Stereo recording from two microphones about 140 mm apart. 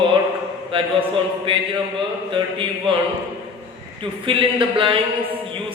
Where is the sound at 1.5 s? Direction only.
40° right (ahead or behind).